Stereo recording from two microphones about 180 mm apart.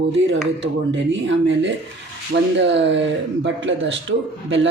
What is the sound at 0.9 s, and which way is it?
A man's voice, 90° right.